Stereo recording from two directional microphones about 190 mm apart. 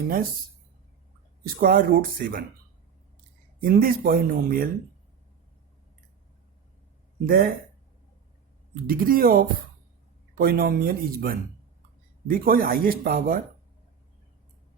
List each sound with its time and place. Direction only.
1.6 s speech: 50° right (ahead or behind)
3.6 s speech: 50° right (ahead or behind)
7.3 s speech: 50° right (ahead or behind)
8.7 s speech: 50° right (ahead or behind)